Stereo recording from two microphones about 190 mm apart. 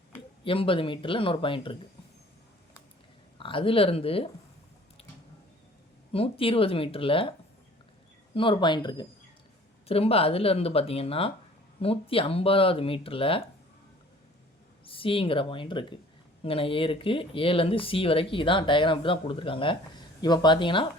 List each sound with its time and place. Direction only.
0.4 s speech: 30° left (ahead or behind)
3.3 s speech: 25° left (ahead or behind)
6.1 s speech: 30° left (ahead or behind)
8.4 s speech: 25° left (ahead or behind)
14.8 s speech: 30° left (ahead or behind)